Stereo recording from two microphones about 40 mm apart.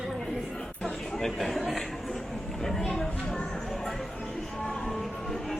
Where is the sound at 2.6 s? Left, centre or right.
Centre.